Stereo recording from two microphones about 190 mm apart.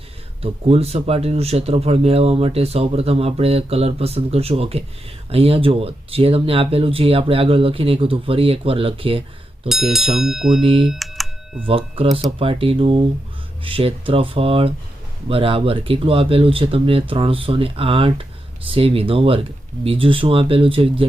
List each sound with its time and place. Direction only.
0.4 s speech: 30° right (ahead or behind)
9.6 s speech: centre (ahead or behind)
10.6 s speech: 30° right (ahead or behind)
10.8 s computer keyboard: centre (ahead or behind)
11.6 s speech: 30° right (ahead or behind)